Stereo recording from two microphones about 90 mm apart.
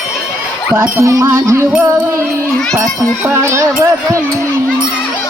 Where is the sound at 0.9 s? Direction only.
35° right (ahead or behind).